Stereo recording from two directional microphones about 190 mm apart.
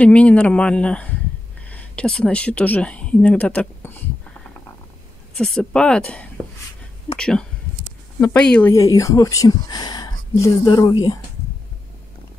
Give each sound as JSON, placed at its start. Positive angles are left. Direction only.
{"t": 0.0, "sound": "speech", "side_deg": 5}
{"t": 5.3, "sound": "speech", "side_deg": 5}
{"t": 8.7, "sound": "speech", "side_deg": 15}